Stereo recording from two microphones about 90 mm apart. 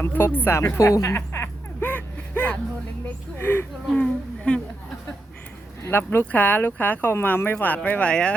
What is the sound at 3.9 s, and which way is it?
Speech, 15° left (ahead or behind).